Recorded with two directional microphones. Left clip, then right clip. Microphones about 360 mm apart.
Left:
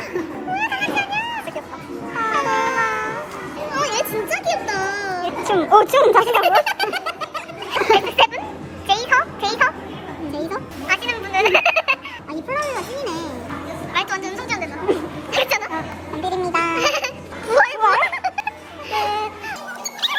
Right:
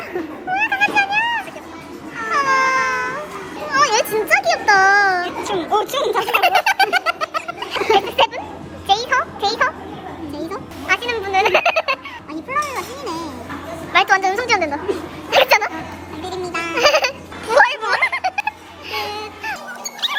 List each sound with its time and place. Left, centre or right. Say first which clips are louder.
0.5 s vehicle: right 5 dB; centre
2.3 s cat: right 5 dB; centre
3.7 s children playing: right 6 dB; centre
5.8 s speech: left 6 dB; centre
6.2 s a sound: even; centre
15.3 s music: right 7 dB; centre
16.2 s baby laughter: left 4 dB; centre
16.7 s a sound: right 5 dB; centre
19.5 s music: right 2 dB; centre